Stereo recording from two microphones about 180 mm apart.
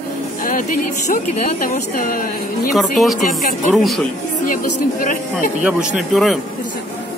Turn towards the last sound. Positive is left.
turn(degrees=0)  # may be behind; listen again after turning